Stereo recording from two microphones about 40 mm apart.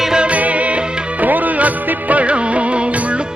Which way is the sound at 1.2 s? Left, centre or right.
Right.